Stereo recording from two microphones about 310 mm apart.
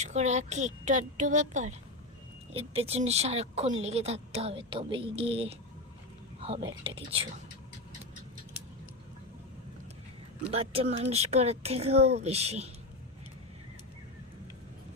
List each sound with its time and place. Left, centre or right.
0.0 s speech: right
10.5 s speech: centre